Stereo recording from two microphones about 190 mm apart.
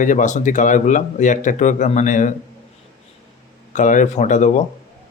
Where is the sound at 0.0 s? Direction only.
40° left (ahead or behind).